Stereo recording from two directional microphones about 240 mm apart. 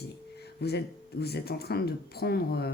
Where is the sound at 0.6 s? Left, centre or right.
Left.